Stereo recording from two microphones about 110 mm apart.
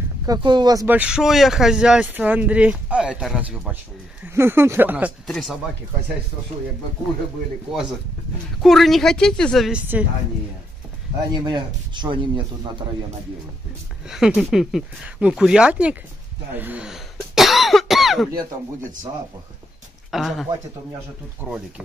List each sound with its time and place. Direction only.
0.4 s speech: 45° right (ahead or behind)
0.8 s speech: 10° right (ahead or behind)
4.3 s speech: 20° right (ahead or behind)
5.2 s speech: centre (ahead or behind)
8.6 s speech: centre (ahead or behind)
9.7 s speech: 10° right (ahead or behind)
11.4 s speech: 45° right (ahead or behind)
14.0 s speech: 5° right (ahead or behind)
16.5 s cough: 15° right (ahead or behind)
20.1 s speech: centre (ahead or behind)